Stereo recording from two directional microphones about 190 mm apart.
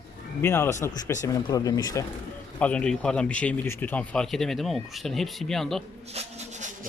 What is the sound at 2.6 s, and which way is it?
Speech, 5° left (ahead or behind).